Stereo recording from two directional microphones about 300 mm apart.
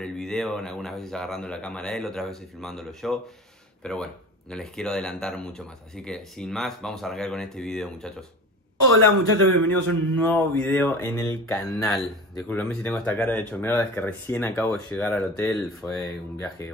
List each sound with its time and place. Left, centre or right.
0.0 s speech: centre
8.8 s speech: right
10.1 s speech: centre